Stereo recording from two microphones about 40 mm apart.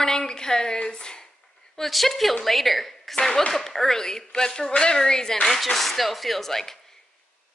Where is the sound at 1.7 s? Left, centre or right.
Centre.